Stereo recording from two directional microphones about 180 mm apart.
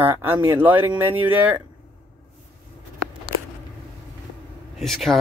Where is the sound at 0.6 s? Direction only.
10° right (ahead or behind).